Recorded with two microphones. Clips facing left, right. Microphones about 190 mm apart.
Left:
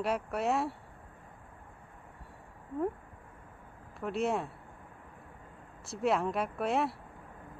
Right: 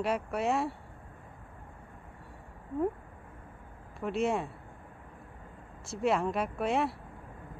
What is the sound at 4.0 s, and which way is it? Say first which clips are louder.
Speech: right 2 dB; centre (ahead or behind).